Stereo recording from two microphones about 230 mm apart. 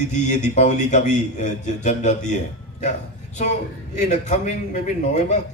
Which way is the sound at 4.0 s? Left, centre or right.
Left.